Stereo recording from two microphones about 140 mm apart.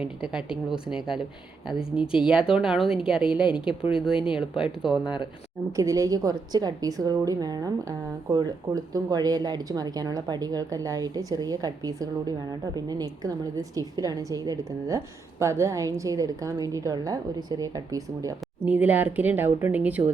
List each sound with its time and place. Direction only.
0.0 s speech: 5° right (ahead or behind)
3.4 s speech: 35° left (ahead or behind)
3.9 s speech: 5° right (ahead or behind)
5.7 s a woman's voice: 20° right (ahead or behind)
18.6 s a woman's voice: 10° right (ahead or behind)